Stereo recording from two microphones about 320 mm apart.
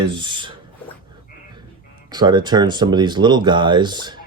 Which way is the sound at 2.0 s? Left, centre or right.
Centre.